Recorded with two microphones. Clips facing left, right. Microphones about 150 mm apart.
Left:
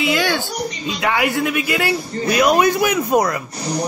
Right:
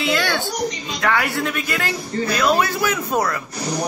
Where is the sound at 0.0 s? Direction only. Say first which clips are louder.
Left 2 dB; 15° left (ahead or behind).